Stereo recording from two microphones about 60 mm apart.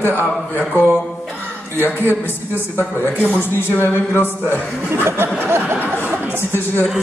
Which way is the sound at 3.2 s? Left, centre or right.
Left.